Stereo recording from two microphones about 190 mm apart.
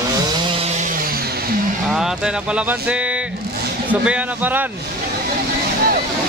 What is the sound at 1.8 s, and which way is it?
Speech, centre (ahead or behind).